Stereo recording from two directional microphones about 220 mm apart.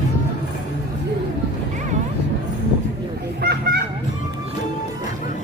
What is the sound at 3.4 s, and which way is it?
Honk, 50° right (ahead or behind).